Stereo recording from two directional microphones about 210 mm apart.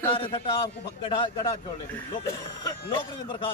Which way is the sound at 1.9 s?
10° left (ahead or behind).